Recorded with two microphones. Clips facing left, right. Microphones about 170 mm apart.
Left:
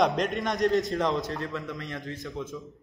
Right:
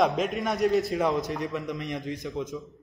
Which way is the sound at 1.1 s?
15° right (ahead or behind).